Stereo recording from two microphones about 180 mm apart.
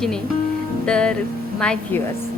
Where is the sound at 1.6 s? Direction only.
5° left (ahead or behind).